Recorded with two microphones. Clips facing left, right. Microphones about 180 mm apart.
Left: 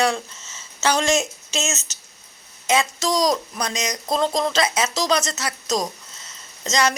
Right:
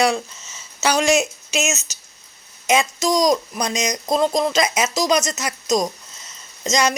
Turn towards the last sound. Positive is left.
turn(degrees=-15)  # may be behind; listen again after turning